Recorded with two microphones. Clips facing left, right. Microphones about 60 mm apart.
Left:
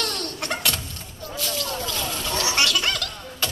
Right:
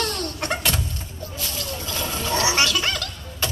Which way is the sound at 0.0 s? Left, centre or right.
Centre.